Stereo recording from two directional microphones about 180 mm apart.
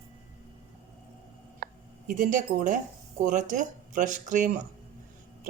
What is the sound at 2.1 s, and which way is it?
Speech, 45° right (ahead or behind).